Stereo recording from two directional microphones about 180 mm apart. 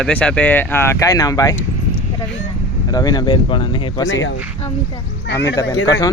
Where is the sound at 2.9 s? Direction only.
20° left (ahead or behind).